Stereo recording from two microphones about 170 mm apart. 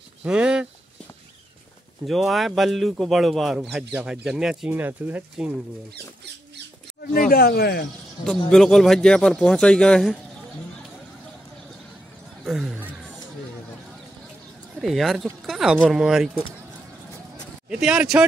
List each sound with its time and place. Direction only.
0.2 s a sound: 5° right (ahead or behind)
2.0 s speech: centre (ahead or behind)
7.0 s speech: 55° left (ahead or behind)
8.2 s speech: 5° left (ahead or behind)
12.4 s speech: centre (ahead or behind)
14.8 s speech: centre (ahead or behind)
17.6 s speech: 5° right (ahead or behind)